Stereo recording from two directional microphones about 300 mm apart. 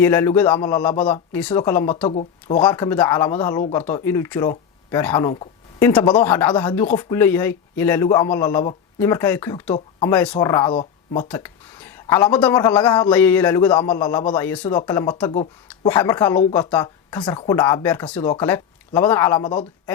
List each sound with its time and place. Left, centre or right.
0.0 s speech: centre
2.0 s speech: centre